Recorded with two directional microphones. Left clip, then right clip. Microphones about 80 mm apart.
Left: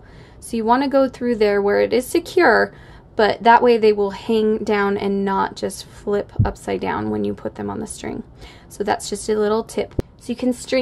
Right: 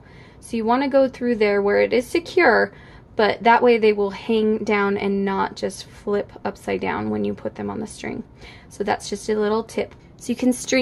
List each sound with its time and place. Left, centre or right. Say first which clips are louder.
0.5 s a woman's voice: left 2 dB; left
10.2 s a woman's voice: right 2 dB; right